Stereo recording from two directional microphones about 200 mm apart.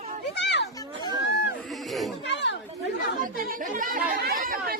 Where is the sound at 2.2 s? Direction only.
60° left (ahead or behind).